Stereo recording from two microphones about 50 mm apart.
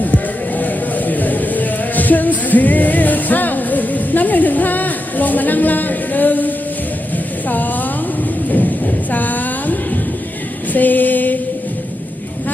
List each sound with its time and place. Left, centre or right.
0.0 s music: left
7.4 s a woman's voice: left
9.1 s a sound: left